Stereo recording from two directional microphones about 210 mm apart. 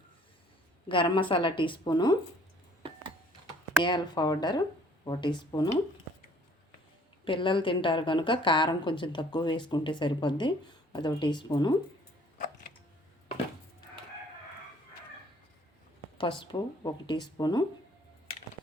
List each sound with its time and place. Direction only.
0.9 s a woman's voice: 25° left (ahead or behind)
3.8 s a woman's voice: 20° left (ahead or behind)
7.3 s a woman's voice: 25° left (ahead or behind)
16.1 s a woman's voice: 25° left (ahead or behind)